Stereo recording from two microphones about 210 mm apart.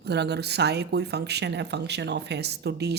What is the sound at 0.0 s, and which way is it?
Speech, 50° right (ahead or behind).